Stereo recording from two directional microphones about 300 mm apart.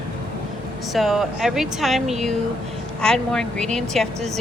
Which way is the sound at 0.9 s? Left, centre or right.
Centre.